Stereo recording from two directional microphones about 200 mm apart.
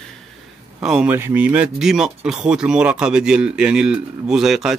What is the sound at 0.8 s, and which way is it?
Speech, 5° right (ahead or behind).